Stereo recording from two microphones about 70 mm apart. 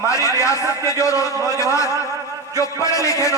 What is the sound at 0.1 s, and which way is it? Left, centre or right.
A man's voice, left.